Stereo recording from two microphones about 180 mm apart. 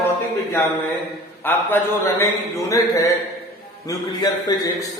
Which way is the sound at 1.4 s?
10° left (ahead or behind).